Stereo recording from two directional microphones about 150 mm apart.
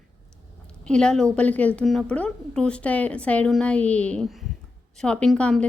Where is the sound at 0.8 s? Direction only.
5° left (ahead or behind).